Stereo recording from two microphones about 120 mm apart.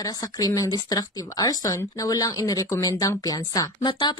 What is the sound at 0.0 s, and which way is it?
Speech, 30° left (ahead or behind).